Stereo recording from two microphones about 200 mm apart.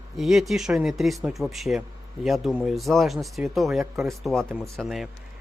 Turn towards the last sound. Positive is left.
turn(degrees=0)  # may be behind; listen again after turning